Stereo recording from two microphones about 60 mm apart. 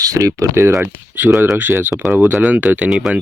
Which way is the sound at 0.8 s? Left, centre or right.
Right.